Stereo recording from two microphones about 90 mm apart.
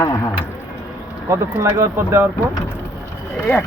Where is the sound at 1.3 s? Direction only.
35° right (ahead or behind).